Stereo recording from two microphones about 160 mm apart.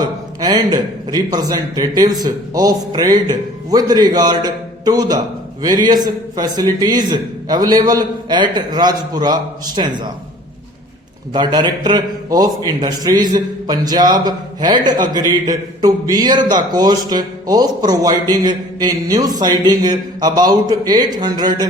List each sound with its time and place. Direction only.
0.0 s a man's voice: 25° right (ahead or behind)
11.3 s a man's voice: 30° right (ahead or behind)